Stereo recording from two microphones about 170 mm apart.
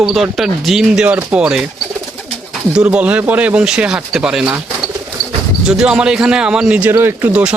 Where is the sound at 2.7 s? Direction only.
5° right (ahead or behind).